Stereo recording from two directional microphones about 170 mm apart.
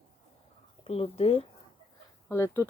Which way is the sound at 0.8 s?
35° left (ahead or behind).